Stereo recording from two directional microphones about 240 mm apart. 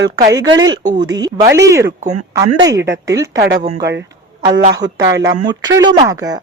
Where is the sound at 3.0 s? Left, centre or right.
Centre.